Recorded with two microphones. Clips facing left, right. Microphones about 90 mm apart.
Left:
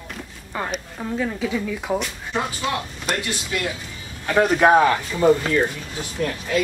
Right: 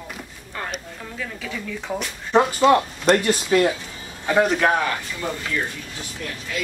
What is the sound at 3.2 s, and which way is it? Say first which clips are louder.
Speech: right 8 dB; 35° right (ahead or behind).